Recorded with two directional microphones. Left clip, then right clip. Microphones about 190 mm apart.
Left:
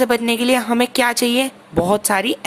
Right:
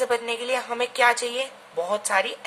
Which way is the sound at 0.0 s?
45° left (ahead or behind).